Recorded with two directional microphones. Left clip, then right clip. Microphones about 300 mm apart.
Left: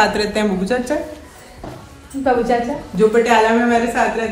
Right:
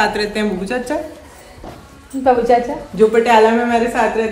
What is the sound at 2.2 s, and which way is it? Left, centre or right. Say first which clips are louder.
A woman's voice: right 3 dB; right.